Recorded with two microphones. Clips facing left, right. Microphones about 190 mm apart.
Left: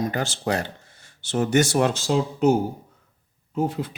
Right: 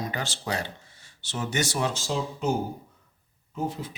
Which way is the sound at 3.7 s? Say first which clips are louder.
Left 5 dB; 65° left (ahead or behind).